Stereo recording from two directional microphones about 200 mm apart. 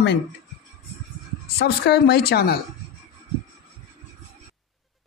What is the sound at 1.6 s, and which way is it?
Speech, 50° left (ahead or behind).